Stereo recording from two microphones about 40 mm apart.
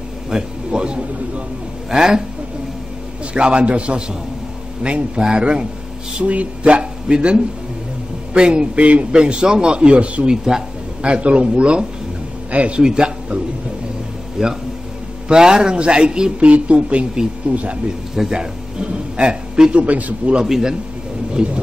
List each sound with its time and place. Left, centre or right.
0.3 s a man's voice: centre
3.3 s a man's voice: right
6.1 s a man's voice: right
10.3 s a man's voice: centre
11.0 s a man's voice: right
12.8 s a man's voice: centre
14.4 s a man's voice: centre
16.4 s a man's voice: right
19.7 s a man's voice: right
20.4 s a man's voice: centre
21.4 s a man's voice: right